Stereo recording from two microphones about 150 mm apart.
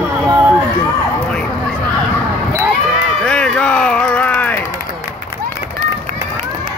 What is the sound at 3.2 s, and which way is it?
Music, 5° left (ahead or behind).